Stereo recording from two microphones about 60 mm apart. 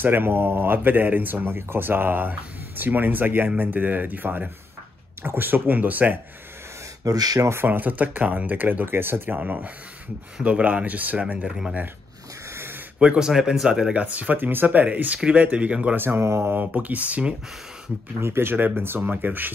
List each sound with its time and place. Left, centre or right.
0.0 s speech: right
7.1 s speech: right
7.6 s speech: right
9.4 s speech: right
13.0 s speech: centre
13.9 s speech: right
16.0 s speech: right
16.5 s speech: right
18.2 s speech: right